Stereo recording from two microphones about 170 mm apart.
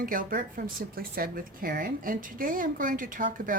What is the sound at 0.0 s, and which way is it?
Speech, 55° right (ahead or behind).